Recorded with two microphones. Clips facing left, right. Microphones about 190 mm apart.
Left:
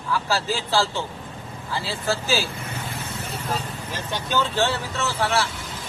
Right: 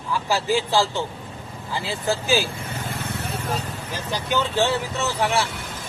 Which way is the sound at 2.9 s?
60° right (ahead or behind).